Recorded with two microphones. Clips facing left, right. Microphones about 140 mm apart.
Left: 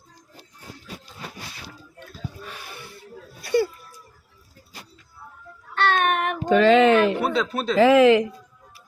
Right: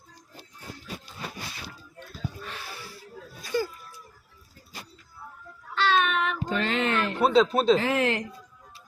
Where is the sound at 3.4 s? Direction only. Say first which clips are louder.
Left 7 dB; 70° left (ahead or behind).